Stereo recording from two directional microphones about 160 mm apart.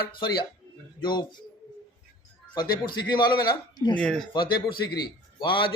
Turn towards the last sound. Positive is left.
turn(degrees=30)  # may be behind; listen again after turning